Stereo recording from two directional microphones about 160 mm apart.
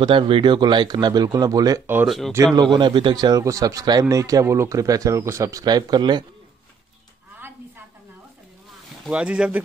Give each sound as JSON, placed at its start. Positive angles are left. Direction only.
{"t": 0.0, "sound": "speech", "side_deg": -30}
{"t": 2.0, "sound": "speech", "side_deg": 0}
{"t": 2.3, "sound": "speech", "side_deg": -25}
{"t": 7.3, "sound": "a sound", "side_deg": -15}
{"t": 9.0, "sound": "speech", "side_deg": -5}